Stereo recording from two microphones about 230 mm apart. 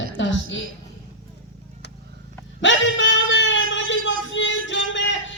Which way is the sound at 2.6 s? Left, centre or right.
Left.